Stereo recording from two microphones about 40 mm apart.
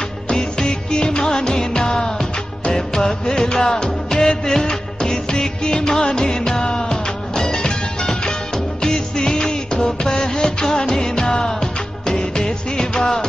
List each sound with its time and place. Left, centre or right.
0.3 s music of bollywood: centre
8.8 s music: centre